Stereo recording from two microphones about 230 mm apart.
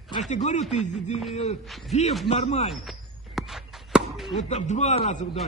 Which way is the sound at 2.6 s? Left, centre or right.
Centre.